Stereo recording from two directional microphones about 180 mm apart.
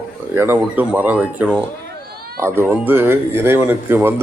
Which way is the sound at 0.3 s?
10° right (ahead or behind).